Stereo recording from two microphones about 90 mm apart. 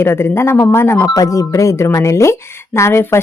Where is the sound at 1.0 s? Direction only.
40° left (ahead or behind).